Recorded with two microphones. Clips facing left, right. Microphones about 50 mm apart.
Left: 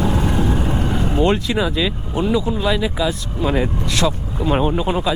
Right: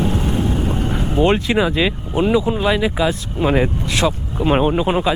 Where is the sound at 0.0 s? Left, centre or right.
Left.